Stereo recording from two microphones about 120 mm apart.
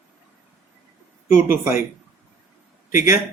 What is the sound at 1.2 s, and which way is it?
Speech, 20° right (ahead or behind).